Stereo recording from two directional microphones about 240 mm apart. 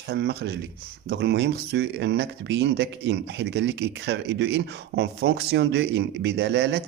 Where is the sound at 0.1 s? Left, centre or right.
Right.